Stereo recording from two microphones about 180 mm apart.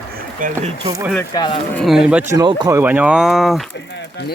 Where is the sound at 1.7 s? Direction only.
Centre (ahead or behind); by 2.8 s 20° right (ahead or behind).